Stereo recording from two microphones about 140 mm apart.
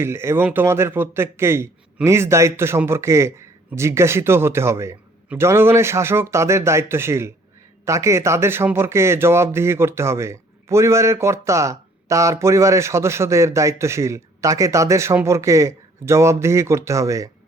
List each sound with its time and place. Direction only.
0.0 s a man's voice: 20° right (ahead or behind)